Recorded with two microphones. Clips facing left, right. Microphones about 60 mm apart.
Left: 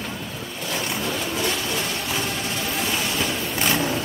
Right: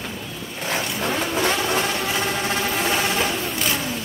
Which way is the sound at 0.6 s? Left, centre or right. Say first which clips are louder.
Right 3 dB; right.